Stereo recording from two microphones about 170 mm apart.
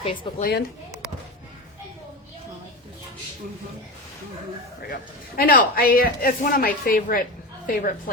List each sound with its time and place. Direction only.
0.0 s a woman's voice: 35° left (ahead or behind)
5.4 s speech: 60° left (ahead or behind)